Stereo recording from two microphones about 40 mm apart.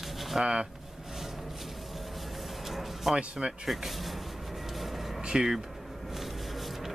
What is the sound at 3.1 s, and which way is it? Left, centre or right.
Speech, right.